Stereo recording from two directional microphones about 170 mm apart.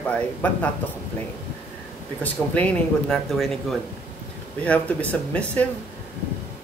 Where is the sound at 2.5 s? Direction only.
5° left (ahead or behind).